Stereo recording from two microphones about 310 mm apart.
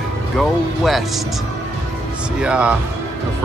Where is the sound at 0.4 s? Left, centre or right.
Centre.